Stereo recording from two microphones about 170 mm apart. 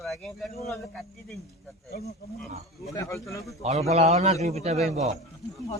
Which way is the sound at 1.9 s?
65° left (ahead or behind).